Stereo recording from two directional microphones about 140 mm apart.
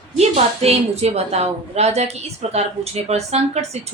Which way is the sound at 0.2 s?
50° right (ahead or behind).